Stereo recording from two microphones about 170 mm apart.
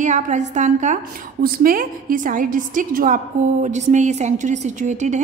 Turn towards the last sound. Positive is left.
turn(degrees=-45)  # may be behind; listen again after turning